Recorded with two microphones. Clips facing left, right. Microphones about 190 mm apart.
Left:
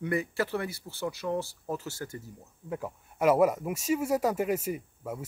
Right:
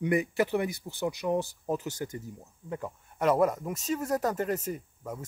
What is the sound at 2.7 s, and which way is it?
Speech, 5° left (ahead or behind).